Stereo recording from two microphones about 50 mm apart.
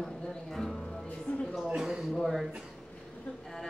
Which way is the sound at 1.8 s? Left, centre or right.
Centre.